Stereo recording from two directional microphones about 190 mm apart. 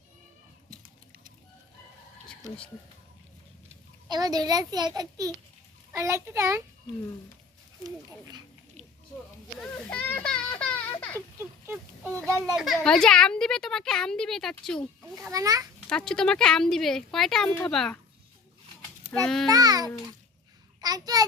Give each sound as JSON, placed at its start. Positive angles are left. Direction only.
{"t": 4.1, "sound": "a child's voice", "side_deg": -20}
{"t": 7.9, "sound": "a child's voice", "side_deg": -20}
{"t": 9.6, "sound": "a sound", "side_deg": 5}
{"t": 11.3, "sound": "a sound", "side_deg": -15}
{"t": 12.5, "sound": "a woman's voice", "side_deg": 0}
{"t": 15.3, "sound": "a child's voice", "side_deg": -20}
{"t": 15.9, "sound": "a woman's voice", "side_deg": 5}
{"t": 19.2, "sound": "a woman's voice", "side_deg": 0}
{"t": 19.5, "sound": "a child's voice", "side_deg": -20}